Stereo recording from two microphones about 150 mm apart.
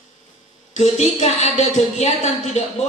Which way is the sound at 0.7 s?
45° left (ahead or behind).